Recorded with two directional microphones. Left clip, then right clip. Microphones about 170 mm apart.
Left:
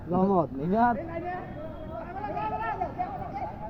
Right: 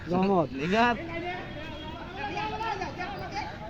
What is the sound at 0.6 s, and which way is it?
Speech, 45° left (ahead or behind).